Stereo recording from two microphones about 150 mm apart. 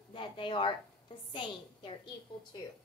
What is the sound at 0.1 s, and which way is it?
A woman's voice, 35° left (ahead or behind).